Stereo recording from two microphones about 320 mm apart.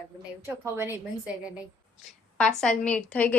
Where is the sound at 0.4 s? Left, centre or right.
Centre.